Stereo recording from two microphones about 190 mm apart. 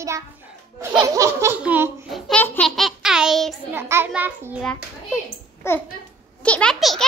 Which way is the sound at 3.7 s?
10° right (ahead or behind).